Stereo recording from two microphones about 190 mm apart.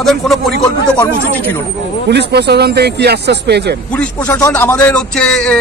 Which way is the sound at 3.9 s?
10° left (ahead or behind).